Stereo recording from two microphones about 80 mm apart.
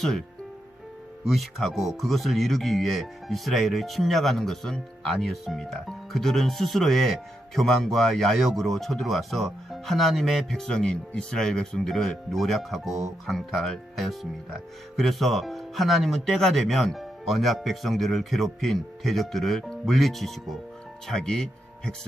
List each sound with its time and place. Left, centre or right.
1.3 s speech: centre